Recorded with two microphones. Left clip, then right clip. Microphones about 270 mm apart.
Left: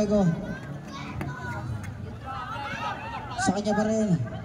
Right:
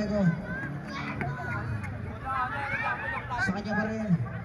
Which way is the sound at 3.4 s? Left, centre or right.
Left.